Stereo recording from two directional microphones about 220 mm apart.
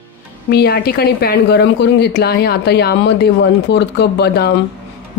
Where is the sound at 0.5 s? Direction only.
45° left (ahead or behind).